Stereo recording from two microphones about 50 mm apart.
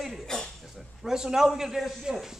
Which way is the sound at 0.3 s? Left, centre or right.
Centre.